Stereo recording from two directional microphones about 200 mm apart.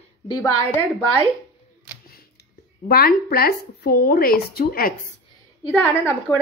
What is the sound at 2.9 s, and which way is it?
A woman's voice, 50° left (ahead or behind).